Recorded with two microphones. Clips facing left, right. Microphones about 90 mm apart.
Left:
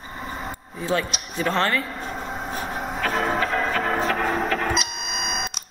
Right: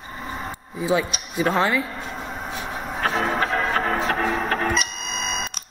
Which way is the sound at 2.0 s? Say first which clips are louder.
Left 1 dB; 40° left (ahead or behind).